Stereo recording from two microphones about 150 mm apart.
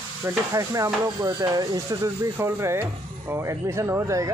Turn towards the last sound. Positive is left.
turn(degrees=-20)  # may be behind; listen again after turning